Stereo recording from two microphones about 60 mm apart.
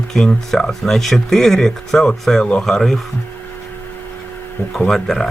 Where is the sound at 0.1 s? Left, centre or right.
Centre.